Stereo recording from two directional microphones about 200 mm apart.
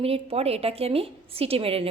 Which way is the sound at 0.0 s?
30° right (ahead or behind).